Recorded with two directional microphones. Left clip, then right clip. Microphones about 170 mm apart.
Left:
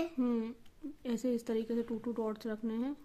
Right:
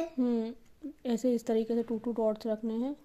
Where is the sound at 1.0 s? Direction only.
25° right (ahead or behind).